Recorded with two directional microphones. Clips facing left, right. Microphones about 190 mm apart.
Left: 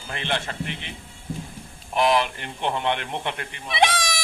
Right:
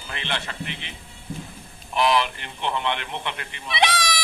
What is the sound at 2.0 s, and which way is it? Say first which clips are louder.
Speech: left 1 dB; 45° left (ahead or behind).